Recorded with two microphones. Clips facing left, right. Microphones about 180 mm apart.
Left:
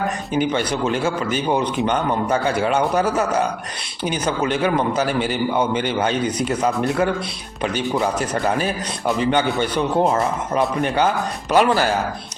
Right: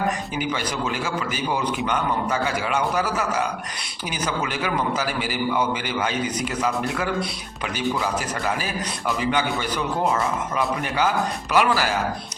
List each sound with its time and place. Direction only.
0.3 s a man's voice: 30° left (ahead or behind)